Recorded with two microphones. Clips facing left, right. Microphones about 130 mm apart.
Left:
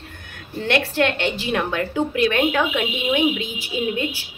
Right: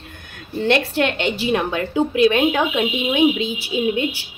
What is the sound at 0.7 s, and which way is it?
A woman's voice, 20° right (ahead or behind).